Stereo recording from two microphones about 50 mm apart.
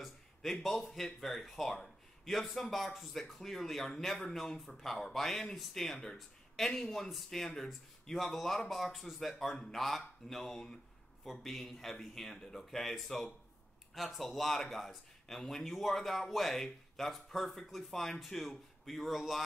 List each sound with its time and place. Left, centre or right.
0.0 s speech: centre